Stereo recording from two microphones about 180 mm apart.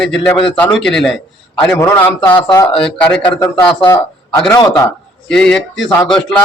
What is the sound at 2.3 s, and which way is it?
Speech, 25° left (ahead or behind).